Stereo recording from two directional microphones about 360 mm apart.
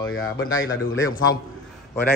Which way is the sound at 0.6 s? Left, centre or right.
Left.